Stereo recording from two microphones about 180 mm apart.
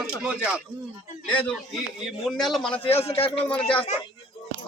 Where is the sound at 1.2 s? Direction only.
5° left (ahead or behind).